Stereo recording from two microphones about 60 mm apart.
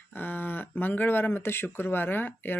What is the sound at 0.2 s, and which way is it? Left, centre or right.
Speech, left.